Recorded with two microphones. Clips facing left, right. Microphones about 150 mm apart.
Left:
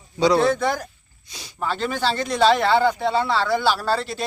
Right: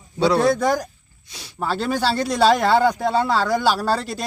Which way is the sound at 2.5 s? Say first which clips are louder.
Right 1 dB; 40° right (ahead or behind).